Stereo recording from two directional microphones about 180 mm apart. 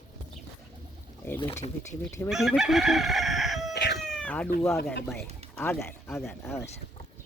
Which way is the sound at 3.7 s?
70° left (ahead or behind).